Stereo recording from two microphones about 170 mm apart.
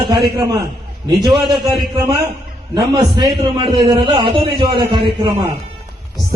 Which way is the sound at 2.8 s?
25° right (ahead or behind).